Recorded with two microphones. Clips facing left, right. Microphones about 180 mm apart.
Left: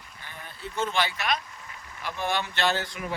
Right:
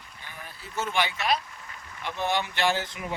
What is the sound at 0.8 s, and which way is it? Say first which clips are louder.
A man's voice: even; 15° right (ahead or behind).